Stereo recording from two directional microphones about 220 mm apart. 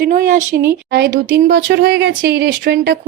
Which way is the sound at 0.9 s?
50° right (ahead or behind).